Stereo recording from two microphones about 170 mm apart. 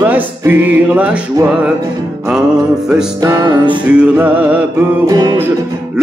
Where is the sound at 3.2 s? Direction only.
25° right (ahead or behind).